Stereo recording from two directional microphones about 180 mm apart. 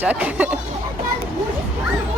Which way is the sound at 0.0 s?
10° right (ahead or behind).